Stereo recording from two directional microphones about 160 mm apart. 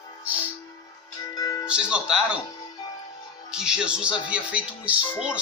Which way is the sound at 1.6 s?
5° right (ahead or behind).